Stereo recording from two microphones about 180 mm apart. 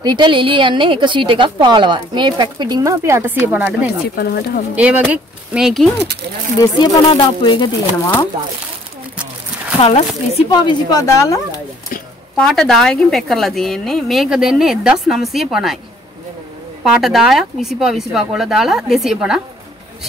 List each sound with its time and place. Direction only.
0.0 s a woman's voice: 25° right (ahead or behind); by 3.9 s 10° right (ahead or behind)
4.1 s speech: 60° left (ahead or behind)
4.7 s speech: 10° right (ahead or behind)
6.6 s speech: 20° left (ahead or behind)
9.8 s speech: 35° left (ahead or behind)
10.6 s speech: 20° left (ahead or behind)
12.4 s a woman's voice: centre (ahead or behind)
16.8 s a woman's voice: centre (ahead or behind)